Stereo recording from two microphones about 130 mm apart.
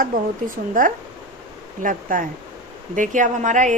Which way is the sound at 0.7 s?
90° right.